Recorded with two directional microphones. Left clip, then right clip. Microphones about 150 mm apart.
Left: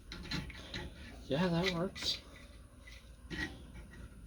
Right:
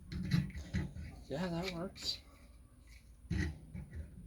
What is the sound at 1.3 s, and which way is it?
Speech, 35° left (ahead or behind).